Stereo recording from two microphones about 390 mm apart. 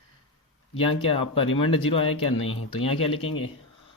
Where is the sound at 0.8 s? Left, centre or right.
Centre.